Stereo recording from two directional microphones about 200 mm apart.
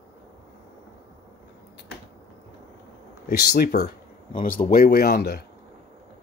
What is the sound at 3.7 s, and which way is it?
Speech, 35° left (ahead or behind).